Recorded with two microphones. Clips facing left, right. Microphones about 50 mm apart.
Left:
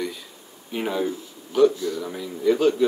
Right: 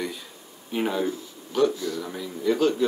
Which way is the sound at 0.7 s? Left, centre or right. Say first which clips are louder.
Even; centre.